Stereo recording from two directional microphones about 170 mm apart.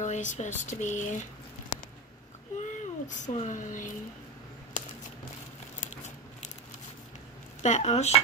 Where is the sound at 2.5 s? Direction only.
45° left (ahead or behind).